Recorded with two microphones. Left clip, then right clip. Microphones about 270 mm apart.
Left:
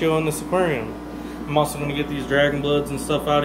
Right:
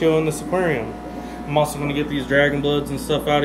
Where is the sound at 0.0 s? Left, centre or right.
Centre.